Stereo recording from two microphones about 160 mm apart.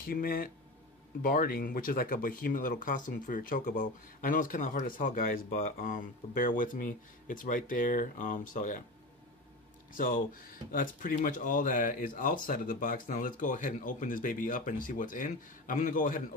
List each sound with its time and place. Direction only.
0.0 s speech: 65° left (ahead or behind)
9.9 s speech: 60° left (ahead or behind)